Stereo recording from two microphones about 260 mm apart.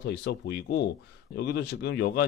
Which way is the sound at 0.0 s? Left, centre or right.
Left.